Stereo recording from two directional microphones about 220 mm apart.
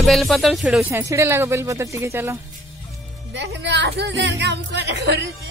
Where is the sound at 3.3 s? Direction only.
55° right (ahead or behind).